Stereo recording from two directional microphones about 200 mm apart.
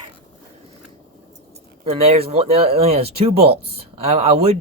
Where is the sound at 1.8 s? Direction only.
30° right (ahead or behind).